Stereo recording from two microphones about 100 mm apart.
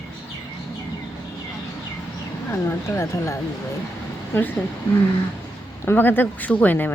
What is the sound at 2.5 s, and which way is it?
Speech, 25° left (ahead or behind).